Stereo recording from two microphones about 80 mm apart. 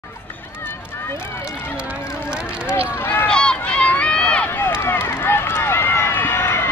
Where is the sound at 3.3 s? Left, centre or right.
Centre.